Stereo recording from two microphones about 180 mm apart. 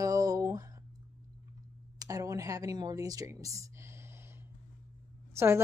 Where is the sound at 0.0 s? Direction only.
20° right (ahead or behind).